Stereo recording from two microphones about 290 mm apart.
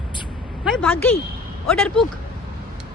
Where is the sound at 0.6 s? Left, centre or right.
Centre.